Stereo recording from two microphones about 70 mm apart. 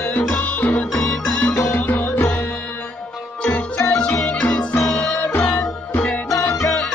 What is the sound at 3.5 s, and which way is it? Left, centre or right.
Music, left.